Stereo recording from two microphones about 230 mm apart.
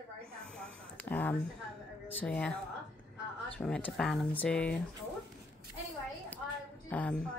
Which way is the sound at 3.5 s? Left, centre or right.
Centre.